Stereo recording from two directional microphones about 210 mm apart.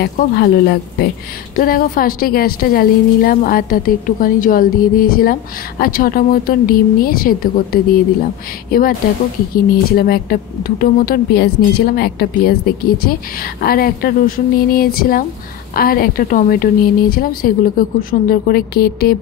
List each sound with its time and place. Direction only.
0.0 s a woman's voice: 50° left (ahead or behind)